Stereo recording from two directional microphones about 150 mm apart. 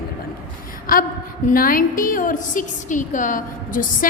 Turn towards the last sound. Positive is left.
turn(degrees=65)  # may be behind; listen again after turning